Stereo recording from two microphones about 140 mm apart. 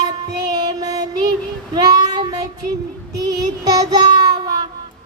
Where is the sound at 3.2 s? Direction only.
25° right (ahead or behind).